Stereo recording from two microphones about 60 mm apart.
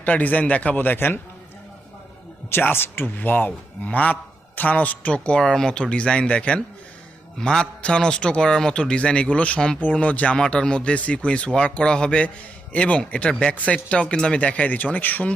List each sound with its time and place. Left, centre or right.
0.0 s a man's voice: left
2.5 s a man's voice: left
10.3 s a man's voice: centre; by 15.3 s left